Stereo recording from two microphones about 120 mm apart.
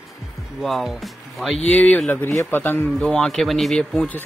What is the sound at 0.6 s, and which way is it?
Speech, centre (ahead or behind).